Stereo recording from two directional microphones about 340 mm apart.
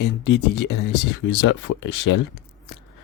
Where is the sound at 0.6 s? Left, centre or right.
Left.